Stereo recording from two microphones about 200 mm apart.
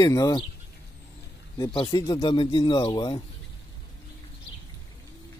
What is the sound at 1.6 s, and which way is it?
Speech, 20° left (ahead or behind).